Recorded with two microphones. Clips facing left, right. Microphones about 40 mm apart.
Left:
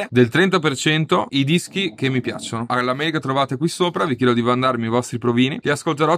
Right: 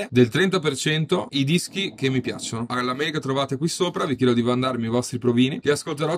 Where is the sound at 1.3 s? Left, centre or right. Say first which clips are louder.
Left 4 dB; left.